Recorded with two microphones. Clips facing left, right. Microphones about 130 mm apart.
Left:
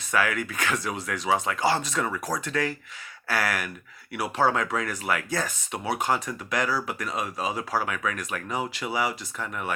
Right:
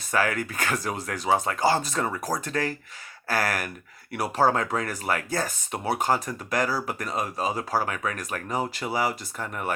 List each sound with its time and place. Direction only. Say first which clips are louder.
0.1 s speech: right 1 dB; 35° right (ahead or behind)